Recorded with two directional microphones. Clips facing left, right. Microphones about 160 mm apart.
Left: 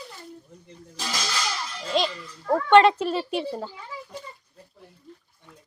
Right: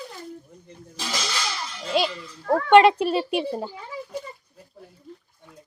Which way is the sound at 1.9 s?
5° right (ahead or behind).